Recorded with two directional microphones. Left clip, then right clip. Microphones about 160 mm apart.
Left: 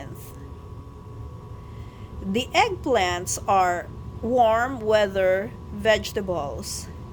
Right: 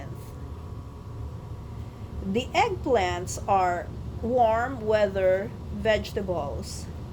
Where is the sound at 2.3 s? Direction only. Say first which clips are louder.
Left 3 dB; 40° left (ahead or behind).